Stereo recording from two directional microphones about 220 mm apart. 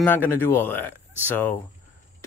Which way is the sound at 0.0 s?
10° left (ahead or behind).